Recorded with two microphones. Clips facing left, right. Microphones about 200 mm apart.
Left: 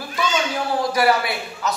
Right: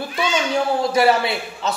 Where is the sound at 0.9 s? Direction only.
25° right (ahead or behind).